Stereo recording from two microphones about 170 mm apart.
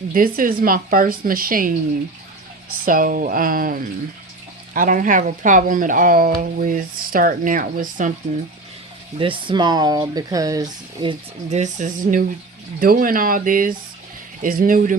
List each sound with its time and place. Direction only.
0.1 s a woman's voice: 55° right (ahead or behind)
2.8 s a woman's voice: 55° right (ahead or behind)
9.1 s speech: 30° right (ahead or behind)
11.4 s a woman's voice: 45° right (ahead or behind)